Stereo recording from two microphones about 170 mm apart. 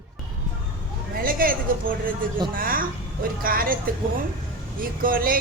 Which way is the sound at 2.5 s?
55° right (ahead or behind).